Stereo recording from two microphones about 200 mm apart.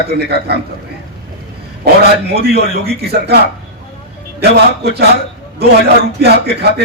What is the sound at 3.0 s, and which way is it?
Speech, 55° right (ahead or behind).